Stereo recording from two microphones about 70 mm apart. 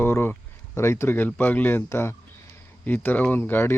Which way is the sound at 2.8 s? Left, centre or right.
Left.